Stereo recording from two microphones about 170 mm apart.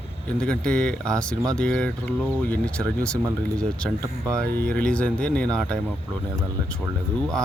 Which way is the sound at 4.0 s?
20° right (ahead or behind).